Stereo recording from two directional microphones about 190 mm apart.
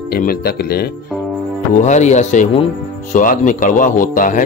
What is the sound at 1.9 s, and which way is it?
Speech, 40° left (ahead or behind).